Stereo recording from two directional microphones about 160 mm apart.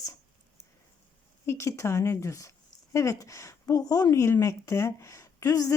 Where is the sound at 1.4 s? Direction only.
20° left (ahead or behind).